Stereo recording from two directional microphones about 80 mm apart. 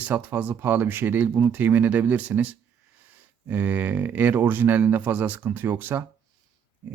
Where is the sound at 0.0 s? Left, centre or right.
Right.